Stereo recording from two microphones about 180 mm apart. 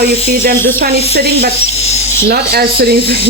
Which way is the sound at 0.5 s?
10° left (ahead or behind).